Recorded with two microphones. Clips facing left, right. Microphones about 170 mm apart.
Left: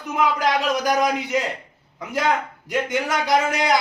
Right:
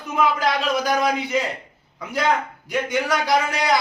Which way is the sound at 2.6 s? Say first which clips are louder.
Even; 20° left (ahead or behind).